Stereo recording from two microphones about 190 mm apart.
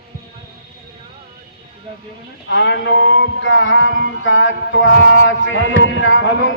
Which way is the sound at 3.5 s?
90° left.